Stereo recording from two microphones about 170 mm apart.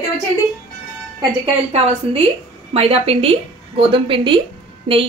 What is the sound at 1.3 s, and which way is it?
A woman's voice, 35° right (ahead or behind).